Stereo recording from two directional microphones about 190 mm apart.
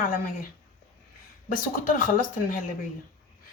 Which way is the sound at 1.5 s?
45° left (ahead or behind).